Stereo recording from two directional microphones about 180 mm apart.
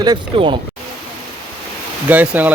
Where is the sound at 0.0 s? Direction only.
25° right (ahead or behind).